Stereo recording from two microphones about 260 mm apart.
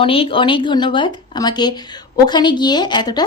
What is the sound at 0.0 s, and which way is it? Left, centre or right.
Speech, left.